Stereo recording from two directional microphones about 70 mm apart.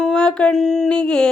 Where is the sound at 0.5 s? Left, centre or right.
Centre.